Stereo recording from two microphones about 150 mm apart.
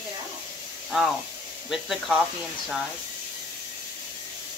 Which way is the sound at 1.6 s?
Centre (ahead or behind).